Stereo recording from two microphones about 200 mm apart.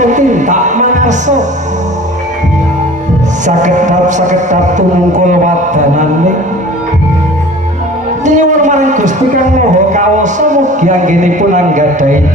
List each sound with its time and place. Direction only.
0.0 s speech: 40° right (ahead or behind)
3.4 s a man's voice: 35° right (ahead or behind)
8.2 s a man's voice: 40° right (ahead or behind)